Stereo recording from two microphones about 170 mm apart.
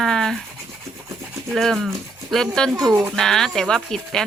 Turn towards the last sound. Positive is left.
turn(degrees=5)  # may be behind; listen again after turning